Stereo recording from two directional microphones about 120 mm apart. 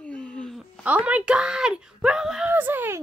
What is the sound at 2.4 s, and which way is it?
Speech, 15° right (ahead or behind).